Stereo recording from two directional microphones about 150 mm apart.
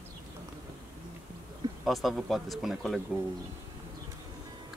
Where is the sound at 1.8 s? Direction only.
Centre (ahead or behind).